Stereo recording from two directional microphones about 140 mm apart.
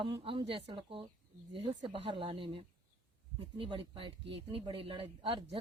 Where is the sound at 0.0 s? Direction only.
40° right (ahead or behind).